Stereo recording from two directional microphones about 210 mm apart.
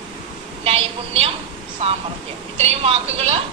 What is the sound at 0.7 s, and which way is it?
Speech, 25° right (ahead or behind).